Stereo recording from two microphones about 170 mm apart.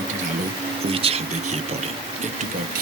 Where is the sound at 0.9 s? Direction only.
35° right (ahead or behind).